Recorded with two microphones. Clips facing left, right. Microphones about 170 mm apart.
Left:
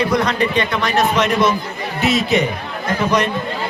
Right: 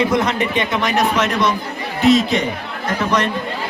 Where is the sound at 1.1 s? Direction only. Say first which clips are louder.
Left 2 dB; centre (ahead or behind).